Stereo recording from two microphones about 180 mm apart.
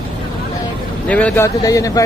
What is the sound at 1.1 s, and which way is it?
Speech, 5° left (ahead or behind).